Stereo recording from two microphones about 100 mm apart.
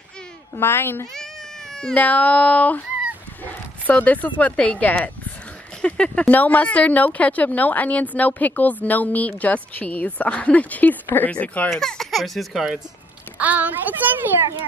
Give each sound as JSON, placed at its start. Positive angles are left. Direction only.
{"t": 0.6, "sound": "a child's voice", "side_deg": 20}
{"t": 1.8, "sound": "speech", "side_deg": 10}
{"t": 11.7, "sound": "speech", "side_deg": 0}
{"t": 13.4, "sound": "a child's voice", "side_deg": -15}